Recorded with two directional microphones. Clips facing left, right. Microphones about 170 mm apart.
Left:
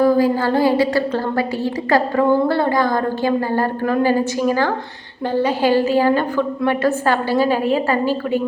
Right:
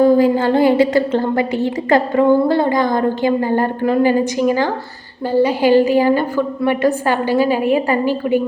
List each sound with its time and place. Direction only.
0.0 s a woman's voice: 25° right (ahead or behind)